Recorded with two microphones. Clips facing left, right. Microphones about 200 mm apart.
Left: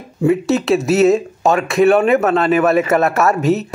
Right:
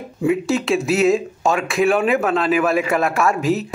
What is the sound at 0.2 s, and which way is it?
A man's voice, centre (ahead or behind).